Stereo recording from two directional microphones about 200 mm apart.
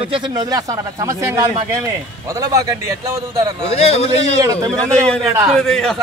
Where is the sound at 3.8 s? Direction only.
30° left (ahead or behind).